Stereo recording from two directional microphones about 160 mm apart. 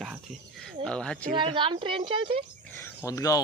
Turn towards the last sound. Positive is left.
turn(degrees=20)  # may be behind; listen again after turning